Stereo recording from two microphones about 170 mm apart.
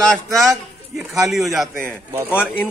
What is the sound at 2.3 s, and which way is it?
Speech, 10° left (ahead or behind).